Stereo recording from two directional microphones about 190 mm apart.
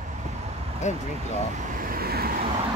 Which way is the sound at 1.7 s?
50° right (ahead or behind).